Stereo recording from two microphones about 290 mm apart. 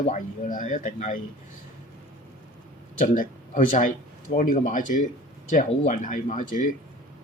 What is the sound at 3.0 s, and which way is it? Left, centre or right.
Speech, left.